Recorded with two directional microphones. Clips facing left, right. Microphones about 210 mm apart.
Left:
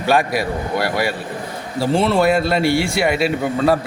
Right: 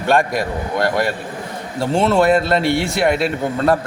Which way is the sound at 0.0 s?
5° left (ahead or behind).